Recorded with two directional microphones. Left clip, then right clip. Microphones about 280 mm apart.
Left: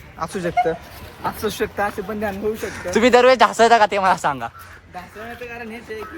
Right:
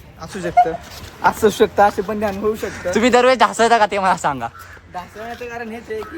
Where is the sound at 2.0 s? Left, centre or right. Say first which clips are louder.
Right 4 dB; centre.